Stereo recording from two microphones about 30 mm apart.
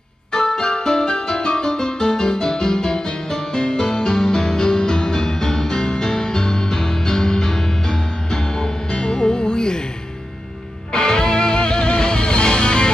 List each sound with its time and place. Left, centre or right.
0.6 s music: left
10.9 s music: left